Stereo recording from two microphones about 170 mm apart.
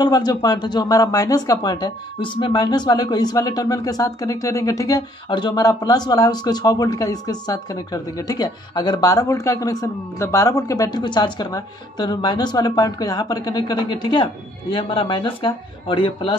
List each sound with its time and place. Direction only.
0.0 s speech: 25° left (ahead or behind)